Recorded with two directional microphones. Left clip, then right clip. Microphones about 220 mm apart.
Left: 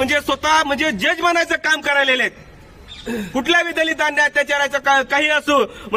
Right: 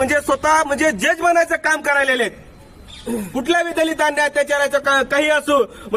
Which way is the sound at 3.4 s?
Centre (ahead or behind).